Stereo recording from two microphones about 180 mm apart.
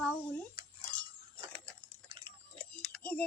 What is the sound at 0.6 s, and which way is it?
Cutlery, 25° right (ahead or behind).